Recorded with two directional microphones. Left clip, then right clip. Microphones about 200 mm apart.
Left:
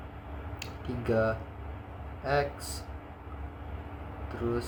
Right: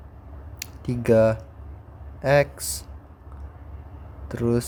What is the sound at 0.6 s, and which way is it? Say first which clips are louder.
Speech: right 8 dB; 90° right.